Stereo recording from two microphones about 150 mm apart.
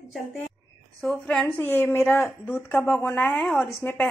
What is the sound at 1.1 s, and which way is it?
Speech, 5° left (ahead or behind).